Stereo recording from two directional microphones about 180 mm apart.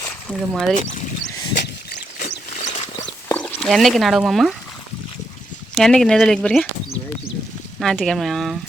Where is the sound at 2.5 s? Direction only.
45° left (ahead or behind).